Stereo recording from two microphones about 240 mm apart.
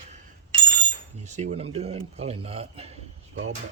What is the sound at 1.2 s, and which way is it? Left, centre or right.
A man's voice, right.